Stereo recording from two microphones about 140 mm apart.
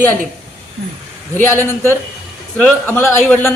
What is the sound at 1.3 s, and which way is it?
Speech, 15° left (ahead or behind).